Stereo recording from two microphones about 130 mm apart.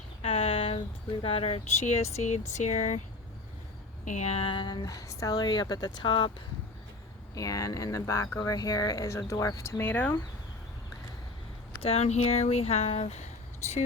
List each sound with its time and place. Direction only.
0.2 s a sound: 45° left (ahead or behind)
1.2 s speech: 45° left (ahead or behind)
1.8 s speech: 60° left (ahead or behind)
4.0 s a woman's voice: 65° left (ahead or behind); by 6.3 s 35° left (ahead or behind)
7.3 s speech: 25° left (ahead or behind)
11.8 s speech: 50° left (ahead or behind)